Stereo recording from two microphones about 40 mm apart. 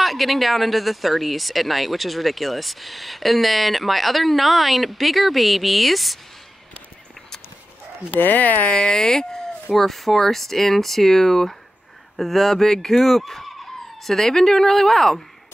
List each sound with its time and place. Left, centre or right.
0.0 s speech: centre
8.2 s speech: left
8.7 s speech: centre
9.7 s speech: centre